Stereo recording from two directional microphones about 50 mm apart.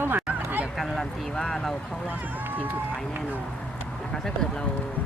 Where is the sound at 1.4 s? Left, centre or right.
Centre.